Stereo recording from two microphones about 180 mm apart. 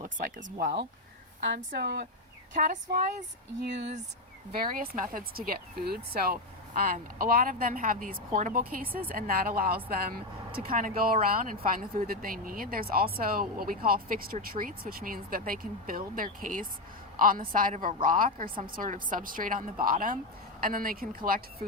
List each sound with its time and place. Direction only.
0.4 s speech: 70° right (ahead or behind)
2.5 s speech: 45° right (ahead or behind)
3.6 s speech: 70° right (ahead or behind)
4.5 s a woman's voice: 55° right (ahead or behind)